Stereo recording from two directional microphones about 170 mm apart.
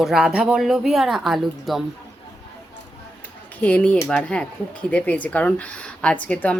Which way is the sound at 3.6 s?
10° left (ahead or behind).